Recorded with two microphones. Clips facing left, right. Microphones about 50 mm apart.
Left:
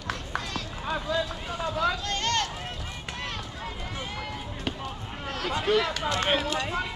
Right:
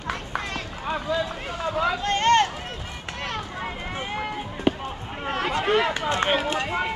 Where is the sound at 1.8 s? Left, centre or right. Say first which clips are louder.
Right 5 dB; right.